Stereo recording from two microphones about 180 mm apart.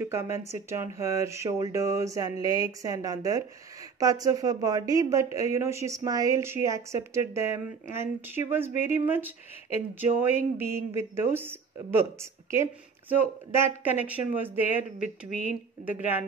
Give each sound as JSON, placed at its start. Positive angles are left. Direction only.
{"t": 0.0, "sound": "a woman's voice", "side_deg": -15}
{"t": 13.8, "sound": "a woman's voice", "side_deg": -10}
{"t": 14.5, "sound": "speech", "side_deg": 45}
{"t": 15.8, "sound": "a woman's voice", "side_deg": -10}